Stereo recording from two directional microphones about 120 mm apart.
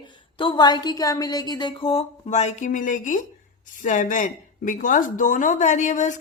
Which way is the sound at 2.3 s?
75° left (ahead or behind).